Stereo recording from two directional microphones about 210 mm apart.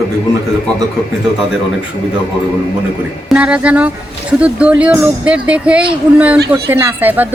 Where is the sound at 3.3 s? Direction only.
5° right (ahead or behind).